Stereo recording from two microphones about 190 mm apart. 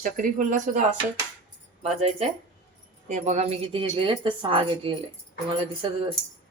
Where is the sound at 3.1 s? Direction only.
40° right (ahead or behind).